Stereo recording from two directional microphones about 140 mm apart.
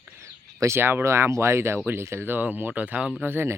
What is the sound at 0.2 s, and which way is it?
Speech, 20° right (ahead or behind).